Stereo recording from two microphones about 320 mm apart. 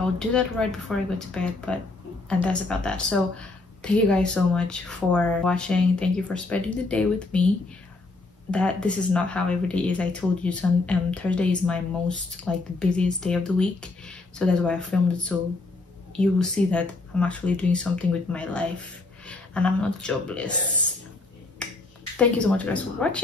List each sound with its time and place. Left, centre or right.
0.3 s speech: centre
8.5 s speech: centre
21.6 s finger snapping: centre
22.1 s speech: centre